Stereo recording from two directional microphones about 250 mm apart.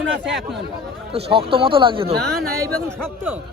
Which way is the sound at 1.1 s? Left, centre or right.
Right.